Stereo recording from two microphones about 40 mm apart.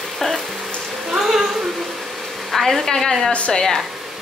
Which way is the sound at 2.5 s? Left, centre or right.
Centre.